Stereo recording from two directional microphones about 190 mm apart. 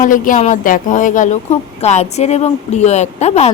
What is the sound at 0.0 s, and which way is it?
A woman's voice, 45° left (ahead or behind).